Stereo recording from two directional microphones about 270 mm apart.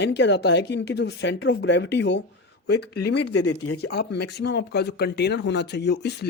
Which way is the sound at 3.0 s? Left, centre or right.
Left.